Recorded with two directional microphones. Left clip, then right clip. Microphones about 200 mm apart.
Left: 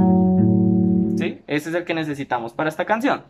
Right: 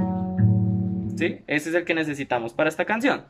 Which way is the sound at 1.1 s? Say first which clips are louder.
Left 1 dB; 5° right (ahead or behind).